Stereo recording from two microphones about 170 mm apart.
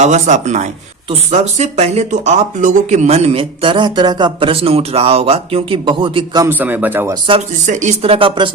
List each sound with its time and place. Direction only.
0.0 s speech: 45° right (ahead or behind); by 6.4 s 30° right (ahead or behind)
6.4 s speech: 10° right (ahead or behind)
7.7 s speech: 45° right (ahead or behind)